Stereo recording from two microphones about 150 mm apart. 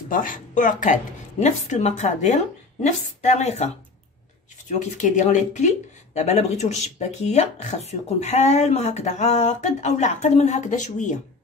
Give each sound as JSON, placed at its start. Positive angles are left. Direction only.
{"t": 0.1, "sound": "speech", "side_deg": 65}